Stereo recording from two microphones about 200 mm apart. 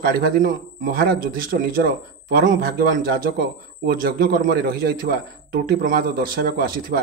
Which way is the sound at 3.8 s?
45° right (ahead or behind).